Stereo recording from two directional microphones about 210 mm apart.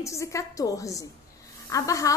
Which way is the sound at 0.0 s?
15° left (ahead or behind).